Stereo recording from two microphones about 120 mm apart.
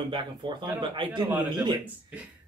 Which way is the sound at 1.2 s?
10° right (ahead or behind).